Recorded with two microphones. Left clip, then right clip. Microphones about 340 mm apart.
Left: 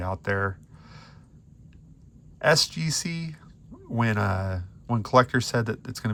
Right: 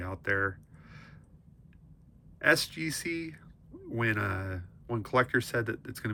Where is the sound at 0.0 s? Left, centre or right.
Centre.